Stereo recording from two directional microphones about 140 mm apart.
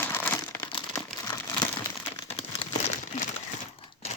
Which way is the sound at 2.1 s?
45° left (ahead or behind).